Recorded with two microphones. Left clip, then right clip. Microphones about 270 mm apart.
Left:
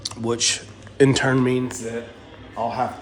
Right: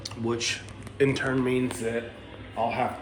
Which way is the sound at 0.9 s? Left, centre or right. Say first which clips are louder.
Left 7 dB; left.